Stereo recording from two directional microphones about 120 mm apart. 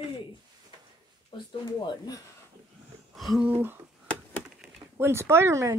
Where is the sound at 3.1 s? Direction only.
Centre (ahead or behind).